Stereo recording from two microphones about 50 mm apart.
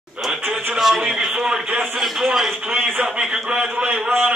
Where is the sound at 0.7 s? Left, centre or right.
Centre.